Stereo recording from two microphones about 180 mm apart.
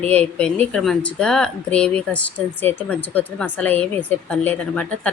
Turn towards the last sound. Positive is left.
turn(degrees=5)  # may be behind; listen again after turning